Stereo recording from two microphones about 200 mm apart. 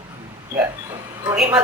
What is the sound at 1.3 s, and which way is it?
Speech, 5° right (ahead or behind).